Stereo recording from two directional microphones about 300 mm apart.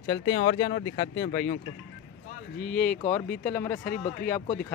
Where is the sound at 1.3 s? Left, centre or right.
Left.